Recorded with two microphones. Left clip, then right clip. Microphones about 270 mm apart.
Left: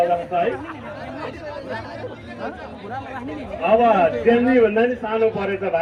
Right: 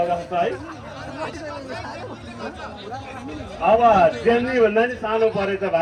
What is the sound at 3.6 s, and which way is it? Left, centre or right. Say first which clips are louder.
A man's voice: right 1 dB; right.